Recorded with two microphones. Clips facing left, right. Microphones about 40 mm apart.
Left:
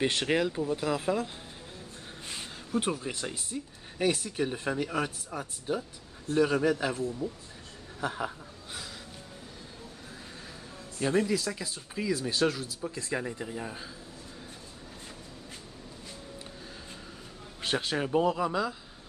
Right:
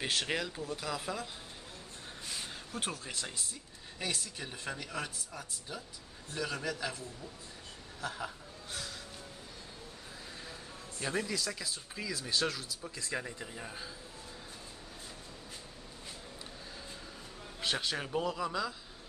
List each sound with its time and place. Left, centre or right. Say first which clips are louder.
0.0 s speech: left 7 dB; centre
2.4 s a man's voice: left 11 dB; centre; by 8.3 s left
11.0 s speech: left 8 dB; centre
17.6 s speech: left 5 dB; centre